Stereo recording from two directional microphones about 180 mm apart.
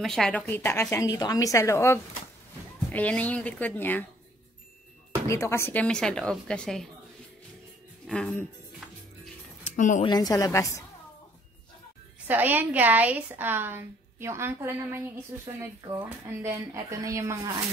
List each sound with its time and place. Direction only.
0.0 s a woman's voice: centre (ahead or behind)
5.3 s speech: 15° left (ahead or behind)
8.1 s speech: 5° left (ahead or behind)
9.8 s speech: 45° left (ahead or behind)
10.0 s a woman's voice: 20° left (ahead or behind)
12.3 s a woman's voice: 10° right (ahead or behind)